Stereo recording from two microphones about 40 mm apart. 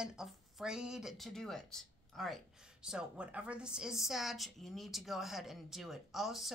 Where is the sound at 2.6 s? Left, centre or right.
Centre.